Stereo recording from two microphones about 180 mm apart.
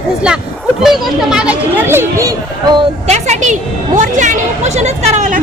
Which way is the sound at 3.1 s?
40° right (ahead or behind).